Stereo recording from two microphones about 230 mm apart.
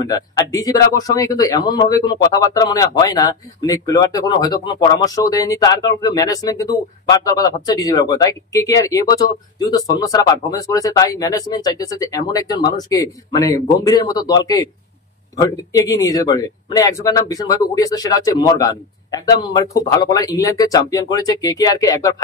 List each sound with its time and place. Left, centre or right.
0.0 s speech: centre